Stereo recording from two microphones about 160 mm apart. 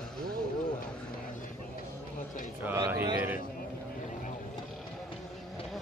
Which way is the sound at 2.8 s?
20° right (ahead or behind).